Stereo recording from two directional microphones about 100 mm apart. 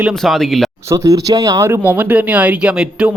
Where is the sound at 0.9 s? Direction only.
35° right (ahead or behind); by 3.1 s 10° right (ahead or behind).